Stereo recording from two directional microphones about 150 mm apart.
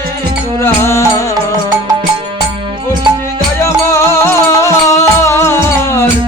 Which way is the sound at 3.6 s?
20° left (ahead or behind).